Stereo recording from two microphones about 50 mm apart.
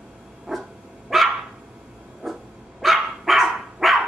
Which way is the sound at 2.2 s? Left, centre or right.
Centre.